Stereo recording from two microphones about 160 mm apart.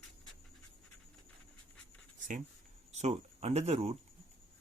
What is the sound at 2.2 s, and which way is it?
Writing, 55° right (ahead or behind).